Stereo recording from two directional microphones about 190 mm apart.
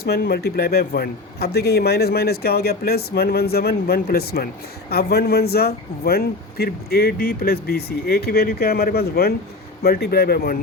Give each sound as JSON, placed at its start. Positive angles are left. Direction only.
{"t": 0.0, "sound": "a man's voice", "side_deg": 55}